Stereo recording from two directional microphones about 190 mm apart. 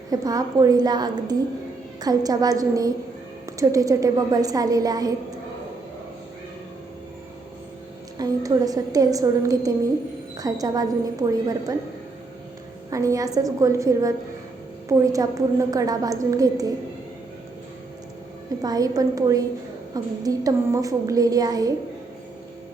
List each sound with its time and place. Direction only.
0.1 s a woman's voice: 20° right (ahead or behind)
8.2 s a woman's voice: 20° right (ahead or behind)
12.9 s a woman's voice: 15° right (ahead or behind)
18.6 s a woman's voice: 20° right (ahead or behind)